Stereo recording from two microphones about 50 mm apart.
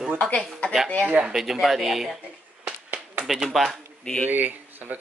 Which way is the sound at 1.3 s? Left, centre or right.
Centre.